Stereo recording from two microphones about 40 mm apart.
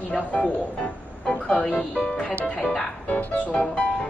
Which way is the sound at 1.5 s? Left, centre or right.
Left.